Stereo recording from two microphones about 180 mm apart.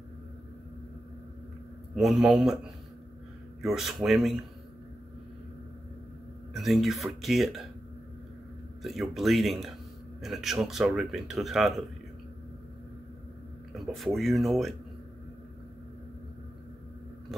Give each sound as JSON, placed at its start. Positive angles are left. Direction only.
{"t": 2.0, "sound": "speech", "side_deg": 0}
{"t": 3.6, "sound": "speech", "side_deg": 0}
{"t": 6.5, "sound": "speech", "side_deg": 0}
{"t": 8.8, "sound": "speech", "side_deg": 0}
{"t": 13.7, "sound": "speech", "side_deg": 0}
{"t": 17.3, "sound": "biting", "side_deg": 0}